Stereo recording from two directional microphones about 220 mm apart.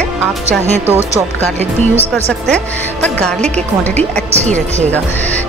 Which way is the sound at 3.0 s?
5° left (ahead or behind).